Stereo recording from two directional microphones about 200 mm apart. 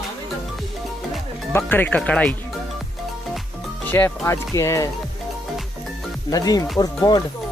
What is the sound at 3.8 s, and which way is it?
Speech, 10° left (ahead or behind).